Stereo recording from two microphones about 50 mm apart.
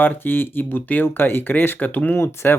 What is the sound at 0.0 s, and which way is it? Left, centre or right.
Speech, left.